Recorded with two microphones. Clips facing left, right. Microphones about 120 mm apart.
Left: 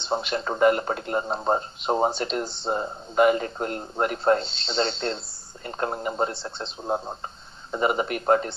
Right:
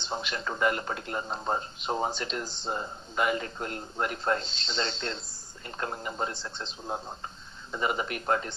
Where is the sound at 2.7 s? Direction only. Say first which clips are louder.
Left 6 dB; 35° left (ahead or behind).